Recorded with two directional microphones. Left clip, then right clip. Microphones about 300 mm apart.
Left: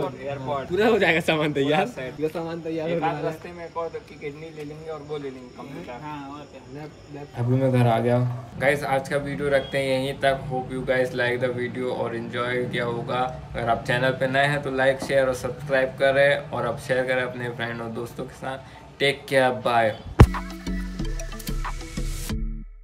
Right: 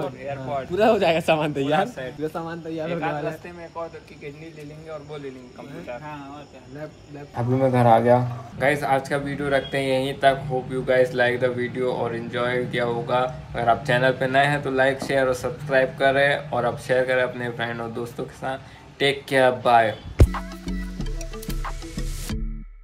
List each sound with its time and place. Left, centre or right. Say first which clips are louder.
0.0 s speech: left 1 dB; centre
0.8 s a man's voice: right 2 dB; right
1.5 s speech: even; centre
4.8 s speech: left 2 dB; centre
7.3 s a man's voice: right 3 dB; centre
8.5 s speech: right 1 dB; centre